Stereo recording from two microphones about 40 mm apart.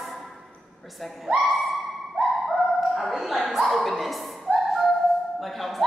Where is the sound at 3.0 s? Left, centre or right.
Centre.